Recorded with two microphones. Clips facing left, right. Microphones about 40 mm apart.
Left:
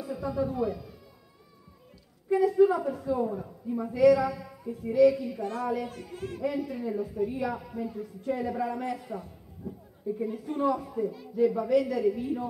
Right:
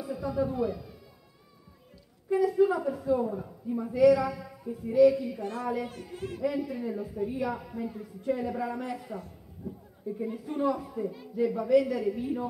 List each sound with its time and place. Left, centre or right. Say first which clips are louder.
0.0 s speech: even; centre
2.2 s a man's voice: left 2 dB; centre
5.4 s a child's voice: left 1 dB; right
6.4 s a man's voice: even; centre
9.2 s a sound: even; centre
10.2 s a man's voice: left 1 dB; centre